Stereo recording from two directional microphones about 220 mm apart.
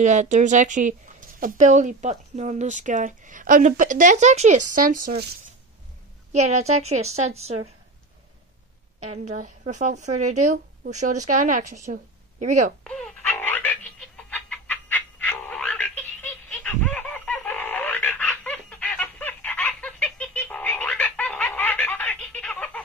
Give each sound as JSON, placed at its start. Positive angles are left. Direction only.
{"t": 0.0, "sound": "speech", "side_deg": -35}
{"t": 6.3, "sound": "a woman's voice", "side_deg": -30}
{"t": 9.4, "sound": "speech", "side_deg": -35}
{"t": 12.8, "sound": "a sound", "side_deg": 5}